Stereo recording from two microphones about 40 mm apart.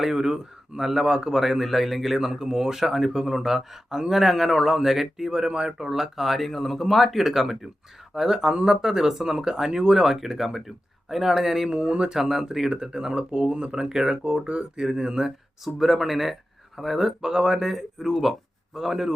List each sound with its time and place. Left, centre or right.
0.0 s speech: centre
5.3 s speech: right
11.7 s speech: right
12.1 s speech: centre